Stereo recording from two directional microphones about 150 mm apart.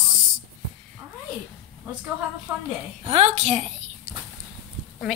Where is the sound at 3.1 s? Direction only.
45° right (ahead or behind).